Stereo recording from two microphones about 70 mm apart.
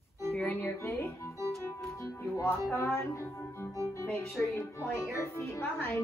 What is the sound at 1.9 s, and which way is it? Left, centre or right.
Speech, left.